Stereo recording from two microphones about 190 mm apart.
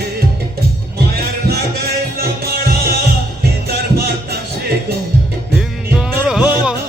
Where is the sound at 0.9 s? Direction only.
55° right (ahead or behind).